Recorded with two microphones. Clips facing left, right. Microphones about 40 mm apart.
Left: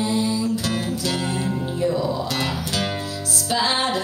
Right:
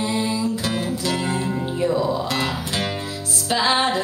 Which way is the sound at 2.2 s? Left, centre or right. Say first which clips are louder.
Right 1 dB; right.